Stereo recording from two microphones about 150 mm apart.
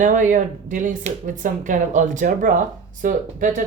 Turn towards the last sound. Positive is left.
turn(degrees=-60)  # may be behind; listen again after turning